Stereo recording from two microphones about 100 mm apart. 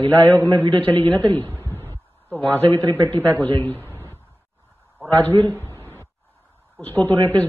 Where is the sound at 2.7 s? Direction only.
30° right (ahead or behind).